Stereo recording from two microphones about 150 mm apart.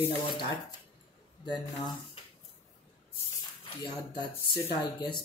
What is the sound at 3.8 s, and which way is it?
Speech, 35° left (ahead or behind).